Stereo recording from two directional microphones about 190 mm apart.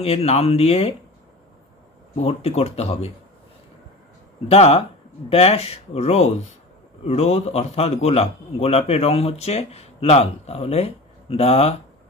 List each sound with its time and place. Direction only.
0.0 s a man's voice: 30° left (ahead or behind)
2.1 s a man's voice: 35° left (ahead or behind)
4.5 s a man's voice: 30° left (ahead or behind)